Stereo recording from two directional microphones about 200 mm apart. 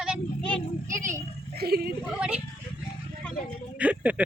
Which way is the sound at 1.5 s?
50° right (ahead or behind).